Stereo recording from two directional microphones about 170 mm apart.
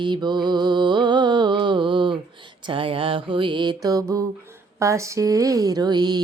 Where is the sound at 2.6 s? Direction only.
30° right (ahead or behind).